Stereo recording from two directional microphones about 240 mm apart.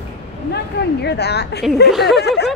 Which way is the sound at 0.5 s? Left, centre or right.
Left.